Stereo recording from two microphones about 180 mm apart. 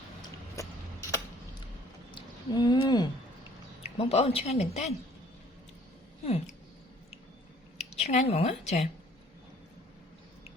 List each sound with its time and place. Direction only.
0.2 s a sound: 20° left (ahead or behind)
3.8 s speech: 35° left (ahead or behind)
7.8 s a woman's voice: 35° left (ahead or behind)